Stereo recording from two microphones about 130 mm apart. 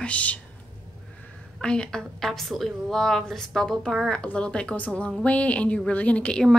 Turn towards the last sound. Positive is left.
turn(degrees=5)  # may be behind; listen again after turning